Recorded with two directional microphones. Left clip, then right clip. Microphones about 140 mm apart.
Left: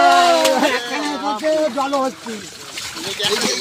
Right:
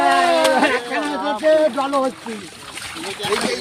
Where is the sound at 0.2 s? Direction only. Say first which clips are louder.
Left 1 dB; 15° left (ahead or behind).